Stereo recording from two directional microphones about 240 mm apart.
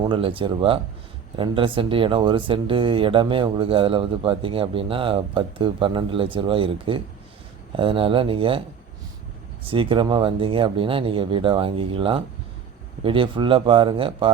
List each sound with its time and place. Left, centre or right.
0.0 s speech: right
9.6 s speech: right